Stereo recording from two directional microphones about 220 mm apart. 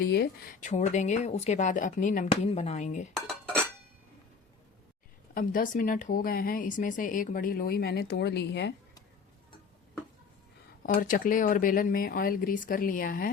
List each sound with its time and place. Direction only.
0.0 s a woman's voice: 45° left (ahead or behind)
3.2 s dishes: centre (ahead or behind)
5.3 s a woman's voice: 40° left (ahead or behind)
10.8 s a woman's voice: 40° left (ahead or behind)